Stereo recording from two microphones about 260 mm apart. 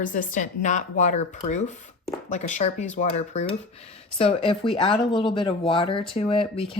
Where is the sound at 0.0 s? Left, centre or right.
Left.